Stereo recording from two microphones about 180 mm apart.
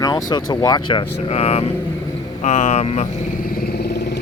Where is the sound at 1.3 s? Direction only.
35° left (ahead or behind).